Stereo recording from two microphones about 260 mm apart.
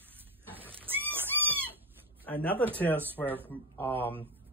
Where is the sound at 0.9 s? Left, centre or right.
Centre.